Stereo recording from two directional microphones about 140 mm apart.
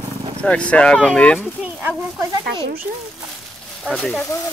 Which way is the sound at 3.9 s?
10° left (ahead or behind).